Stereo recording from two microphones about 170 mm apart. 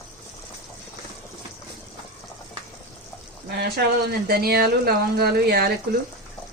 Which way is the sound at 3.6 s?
70° right (ahead or behind).